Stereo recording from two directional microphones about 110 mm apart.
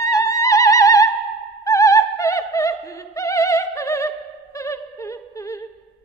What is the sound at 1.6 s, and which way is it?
Opera, 30° left (ahead or behind).